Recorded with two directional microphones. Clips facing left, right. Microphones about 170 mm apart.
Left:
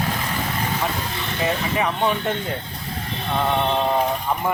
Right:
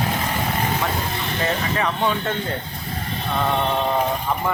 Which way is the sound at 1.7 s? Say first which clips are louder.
Left 1 dB; 15° left (ahead or behind).